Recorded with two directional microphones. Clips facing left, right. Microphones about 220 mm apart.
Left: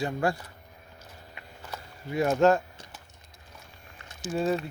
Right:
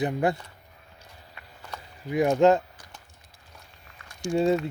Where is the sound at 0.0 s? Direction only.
20° right (ahead or behind).